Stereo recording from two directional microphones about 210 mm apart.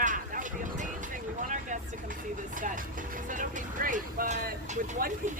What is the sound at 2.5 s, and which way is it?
Speech, 40° right (ahead or behind).